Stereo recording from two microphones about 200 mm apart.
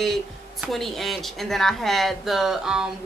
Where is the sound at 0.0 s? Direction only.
Centre (ahead or behind).